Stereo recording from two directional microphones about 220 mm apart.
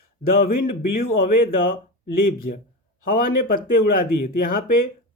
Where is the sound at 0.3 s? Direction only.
40° left (ahead or behind).